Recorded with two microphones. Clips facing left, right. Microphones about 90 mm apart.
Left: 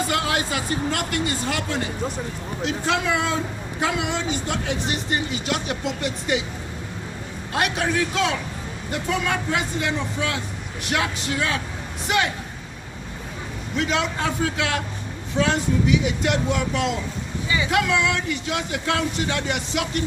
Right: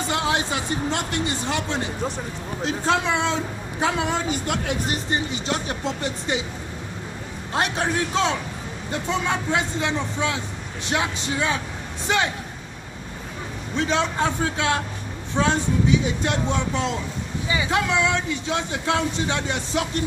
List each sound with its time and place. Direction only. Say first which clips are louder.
0.1 s speech: even; 25° right (ahead or behind)
2.6 s speech: right 1 dB; 35° right (ahead or behind)
3.8 s speech: right 1 dB; 35° right (ahead or behind)
4.3 s speech: right 1 dB; 55° right (ahead or behind)
4.9 s speech: even; 30° right (ahead or behind)
7.5 s speech: left 1 dB; 30° right (ahead or behind)
13.7 s speech: right 1 dB; 35° right (ahead or behind)